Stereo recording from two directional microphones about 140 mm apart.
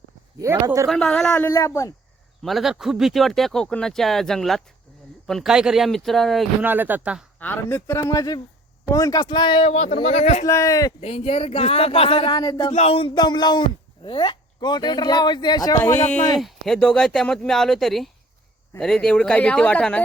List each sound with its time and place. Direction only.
0.3 s a man's voice: 25° right (ahead or behind)
0.9 s speech: 5° left (ahead or behind)
1.5 s speech: 20° left (ahead or behind)
2.4 s speech: centre (ahead or behind)
6.6 s speech: 15° right (ahead or behind)
7.3 s speech: 15° left (ahead or behind)
8.1 s speech: 25° left (ahead or behind)
10.0 s speech: 55° left (ahead or behind)
10.4 s speech: 20° left (ahead or behind)
11.0 s speech: 45° left (ahead or behind)
12.4 s speech: 30° left (ahead or behind)
12.7 s speech: 45° left (ahead or behind); by 15.8 s 30° left (ahead or behind)
16.4 s speech: centre (ahead or behind)